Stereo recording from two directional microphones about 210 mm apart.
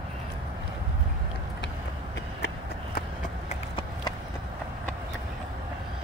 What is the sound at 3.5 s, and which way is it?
Clip-clop, 25° left (ahead or behind).